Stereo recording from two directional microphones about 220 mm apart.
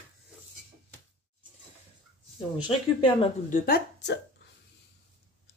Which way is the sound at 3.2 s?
35° left (ahead or behind).